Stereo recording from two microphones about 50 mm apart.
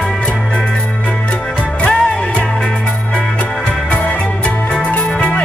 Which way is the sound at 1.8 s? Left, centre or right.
Left.